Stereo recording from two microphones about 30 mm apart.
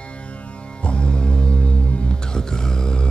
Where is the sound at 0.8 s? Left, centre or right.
Left.